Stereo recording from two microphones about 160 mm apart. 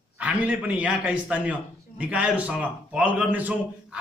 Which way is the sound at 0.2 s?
5° right (ahead or behind).